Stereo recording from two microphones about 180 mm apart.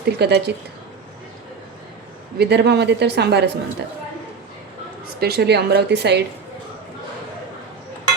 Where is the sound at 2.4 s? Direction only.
65° right (ahead or behind).